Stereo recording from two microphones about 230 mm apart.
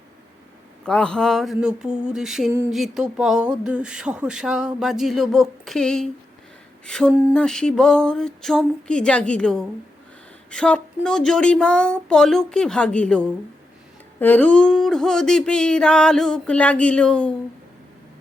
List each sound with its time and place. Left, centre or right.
0.9 s speech: centre